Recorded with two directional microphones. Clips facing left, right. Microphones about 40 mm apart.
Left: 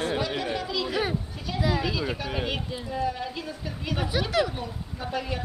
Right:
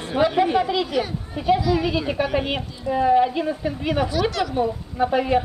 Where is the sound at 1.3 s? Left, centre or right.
Right.